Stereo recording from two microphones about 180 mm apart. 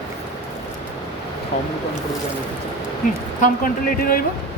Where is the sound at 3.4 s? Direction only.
50° left (ahead or behind).